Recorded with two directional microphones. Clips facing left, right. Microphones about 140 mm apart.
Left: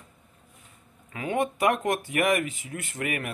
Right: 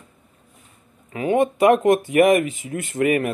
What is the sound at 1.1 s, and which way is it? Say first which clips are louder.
A man's voice: right 8 dB; 25° right (ahead or behind).